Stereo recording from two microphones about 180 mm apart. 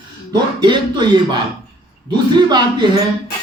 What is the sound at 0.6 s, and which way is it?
Speech, 25° right (ahead or behind).